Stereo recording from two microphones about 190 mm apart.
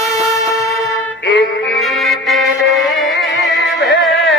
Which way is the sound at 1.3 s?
65° left (ahead or behind).